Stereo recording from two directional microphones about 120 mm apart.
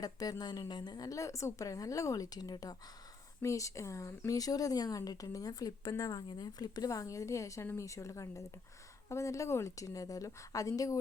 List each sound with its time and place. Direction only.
0.0 s speech: 30° left (ahead or behind)